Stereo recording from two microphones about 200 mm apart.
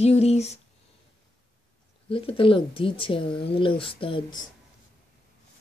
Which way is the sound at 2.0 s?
25° left (ahead or behind).